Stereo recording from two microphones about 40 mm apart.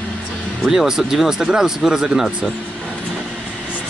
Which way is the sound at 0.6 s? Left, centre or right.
Centre.